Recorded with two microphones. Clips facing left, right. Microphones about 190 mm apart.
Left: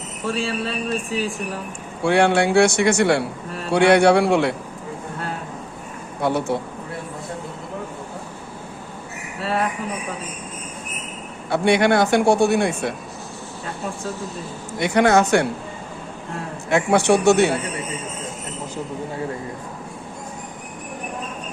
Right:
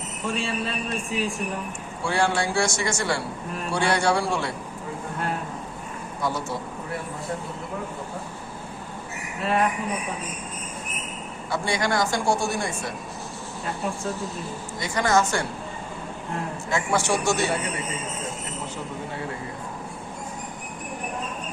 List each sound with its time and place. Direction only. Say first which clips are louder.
0.3 s speech: left 4 dB; 35° left (ahead or behind)
2.0 s speech: left 7 dB; 65° left (ahead or behind)
6.2 s speech: left 7 dB; 65° left (ahead or behind)
9.4 s speech: even; 35° left (ahead or behind)
11.5 s speech: left 8 dB; 65° left (ahead or behind)
14.8 s speech: left 6 dB; 65° left (ahead or behind)
16.6 s speech: left 8 dB; 65° left (ahead or behind)